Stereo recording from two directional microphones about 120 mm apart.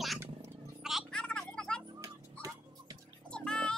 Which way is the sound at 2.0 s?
25° right (ahead or behind).